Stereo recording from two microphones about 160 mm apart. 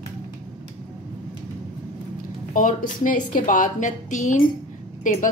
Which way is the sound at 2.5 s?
55° left (ahead or behind).